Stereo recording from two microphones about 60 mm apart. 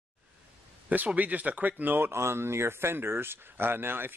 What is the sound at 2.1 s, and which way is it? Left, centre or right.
Speech, right.